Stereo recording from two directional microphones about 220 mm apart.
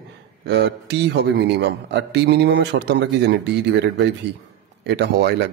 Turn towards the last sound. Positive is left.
turn(degrees=-50)  # may be behind; listen again after turning